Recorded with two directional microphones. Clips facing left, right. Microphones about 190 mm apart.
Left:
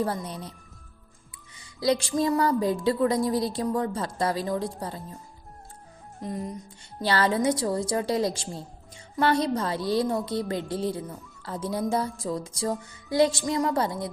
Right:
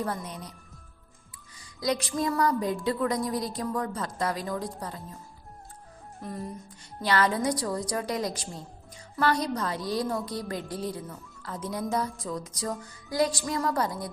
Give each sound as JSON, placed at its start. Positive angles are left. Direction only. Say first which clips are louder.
{"t": 0.0, "sound": "speech", "louder": "left 4 dB", "side_deg": 30}
{"t": 1.5, "sound": "music", "louder": "left 4 dB", "side_deg": 30}
{"t": 2.7, "sound": "a woman's voice", "louder": "left 4 dB", "side_deg": 30}
{"t": 6.2, "sound": "speech", "louder": "left 4 dB", "side_deg": 15}
{"t": 7.0, "sound": "a woman's voice", "louder": "left 2 dB", "side_deg": 30}